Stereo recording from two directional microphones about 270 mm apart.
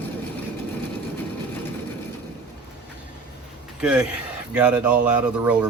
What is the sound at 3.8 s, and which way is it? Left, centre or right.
Speech, centre.